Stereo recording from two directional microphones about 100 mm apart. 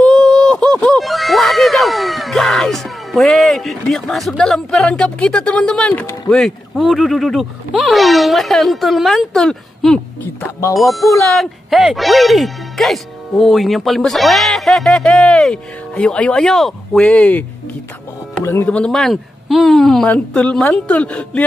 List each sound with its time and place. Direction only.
0.0 s a sound: 5° left (ahead or behind)
6.3 s speech: centre (ahead or behind)
18.4 s speech: 25° left (ahead or behind)
18.7 s a woman's voice: 5° left (ahead or behind)